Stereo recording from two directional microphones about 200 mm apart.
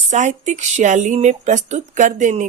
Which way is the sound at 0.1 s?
35° right (ahead or behind).